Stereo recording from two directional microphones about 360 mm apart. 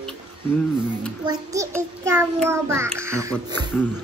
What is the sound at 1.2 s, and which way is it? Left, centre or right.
Child singing, centre.